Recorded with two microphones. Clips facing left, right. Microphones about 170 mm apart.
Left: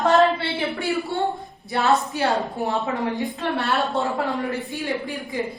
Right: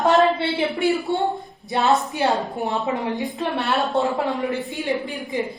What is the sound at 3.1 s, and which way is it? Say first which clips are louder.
Speech: even; centre (ahead or behind).